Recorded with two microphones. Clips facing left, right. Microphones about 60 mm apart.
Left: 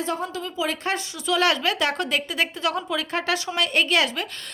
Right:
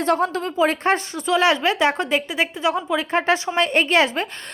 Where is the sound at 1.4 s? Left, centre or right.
Right.